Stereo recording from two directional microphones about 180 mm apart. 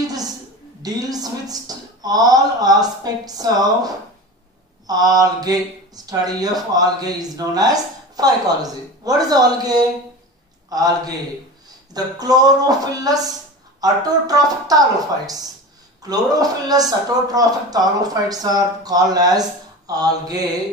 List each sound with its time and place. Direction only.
0.8 s a man's voice: 20° right (ahead or behind)
16.0 s speech: 20° right (ahead or behind)